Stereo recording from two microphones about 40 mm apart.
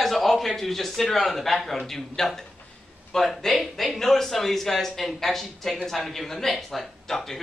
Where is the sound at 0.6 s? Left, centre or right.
Centre.